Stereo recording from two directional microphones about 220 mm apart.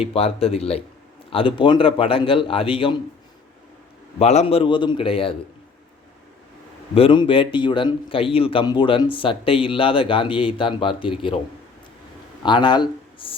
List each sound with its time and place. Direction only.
0.1 s speech: 25° left (ahead or behind)
4.2 s speech: 30° left (ahead or behind)
6.9 s speech: 25° left (ahead or behind)
12.4 s speech: 20° left (ahead or behind)